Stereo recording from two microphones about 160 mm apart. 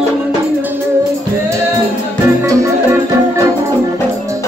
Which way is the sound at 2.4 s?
20° right (ahead or behind).